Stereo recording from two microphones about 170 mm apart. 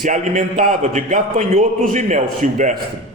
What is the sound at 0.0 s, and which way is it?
A man's voice, 50° right (ahead or behind).